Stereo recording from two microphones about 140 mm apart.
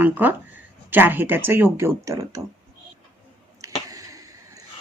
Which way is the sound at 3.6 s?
25° right (ahead or behind).